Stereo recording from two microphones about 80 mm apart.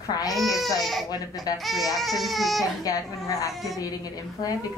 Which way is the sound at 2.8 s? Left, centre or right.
Left.